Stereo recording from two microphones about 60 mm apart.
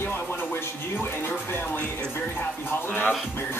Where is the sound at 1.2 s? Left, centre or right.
Left.